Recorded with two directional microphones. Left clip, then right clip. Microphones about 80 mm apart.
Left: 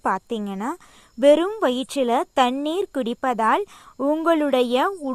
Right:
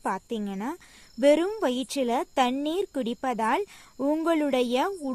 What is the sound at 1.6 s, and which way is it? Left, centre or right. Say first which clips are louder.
Speech: left 5 dB; left.